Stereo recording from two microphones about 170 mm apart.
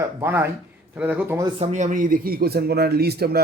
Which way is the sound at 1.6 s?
40° right (ahead or behind).